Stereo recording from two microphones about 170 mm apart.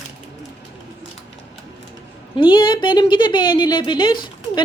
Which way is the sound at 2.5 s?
30° left (ahead or behind).